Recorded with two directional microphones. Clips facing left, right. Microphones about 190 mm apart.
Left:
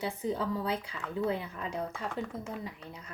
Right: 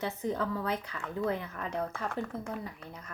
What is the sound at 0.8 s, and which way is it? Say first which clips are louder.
Speech: even; 10° left (ahead or behind).